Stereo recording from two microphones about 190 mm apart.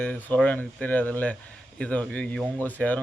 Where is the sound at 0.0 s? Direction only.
10° left (ahead or behind).